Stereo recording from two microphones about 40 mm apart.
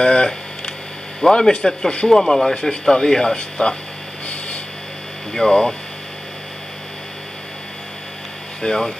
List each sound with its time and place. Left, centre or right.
0.0 s a sound: left
1.3 s speech: left
3.3 s speech: left
5.3 s speech: centre
8.6 s speech: centre